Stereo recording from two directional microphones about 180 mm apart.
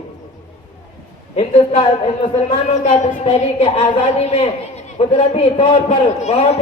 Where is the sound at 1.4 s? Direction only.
35° left (ahead or behind).